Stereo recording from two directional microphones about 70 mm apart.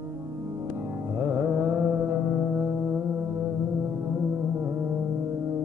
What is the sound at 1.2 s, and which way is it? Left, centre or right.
Carnatic music, right.